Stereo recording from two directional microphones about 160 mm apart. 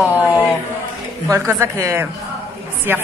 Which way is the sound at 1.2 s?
15° right (ahead or behind).